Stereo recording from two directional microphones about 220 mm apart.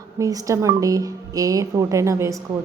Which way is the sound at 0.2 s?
15° right (ahead or behind).